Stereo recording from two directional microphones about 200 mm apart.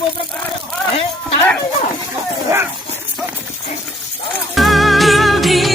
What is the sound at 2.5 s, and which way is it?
Dog, 15° right (ahead or behind).